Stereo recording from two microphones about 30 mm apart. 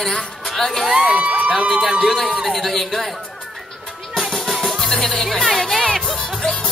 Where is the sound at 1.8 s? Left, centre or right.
Centre.